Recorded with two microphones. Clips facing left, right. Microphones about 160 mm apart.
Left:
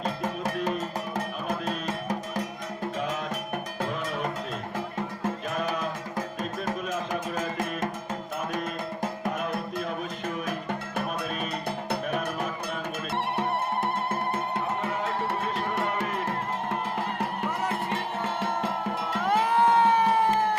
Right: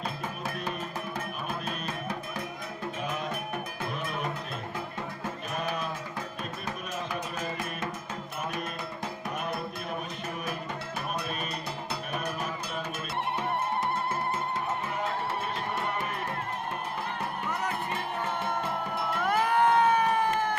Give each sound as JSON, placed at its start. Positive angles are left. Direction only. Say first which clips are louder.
{"t": 0.0, "sound": "music", "louder": "left 5 dB", "side_deg": 45}
{"t": 8.5, "sound": "music", "louder": "left 4 dB", "side_deg": 45}
{"t": 13.8, "sound": "music", "louder": "left 2 dB", "side_deg": 60}
{"t": 19.3, "sound": "crowd", "louder": "left 2 dB", "side_deg": 25}